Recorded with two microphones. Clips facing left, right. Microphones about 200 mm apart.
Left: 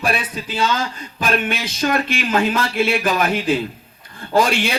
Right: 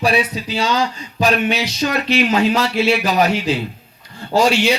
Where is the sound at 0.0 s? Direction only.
50° left (ahead or behind).